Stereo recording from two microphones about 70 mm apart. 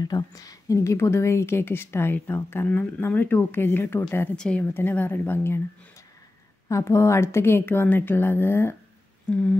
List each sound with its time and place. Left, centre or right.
0.0 s a woman's voice: left
4.4 s a woman's voice: centre
4.7 s a woman's voice: left
6.7 s a woman's voice: left
9.3 s a woman's voice: centre